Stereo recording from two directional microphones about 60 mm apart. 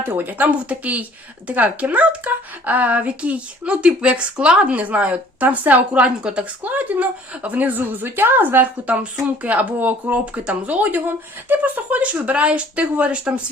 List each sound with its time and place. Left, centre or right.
0.1 s speech: right